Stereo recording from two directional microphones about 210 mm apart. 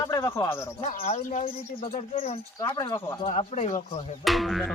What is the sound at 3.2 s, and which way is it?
Speech, 30° left (ahead or behind).